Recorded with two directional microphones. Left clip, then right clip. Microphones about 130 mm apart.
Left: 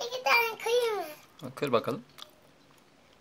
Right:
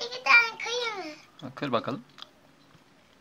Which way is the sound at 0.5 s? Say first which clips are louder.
Left 3 dB; 50° left (ahead or behind).